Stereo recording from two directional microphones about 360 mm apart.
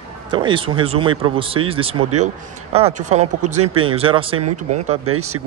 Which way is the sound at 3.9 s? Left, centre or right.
Centre.